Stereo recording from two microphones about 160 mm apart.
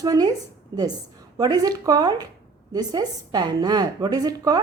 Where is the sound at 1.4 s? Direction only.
25° right (ahead or behind).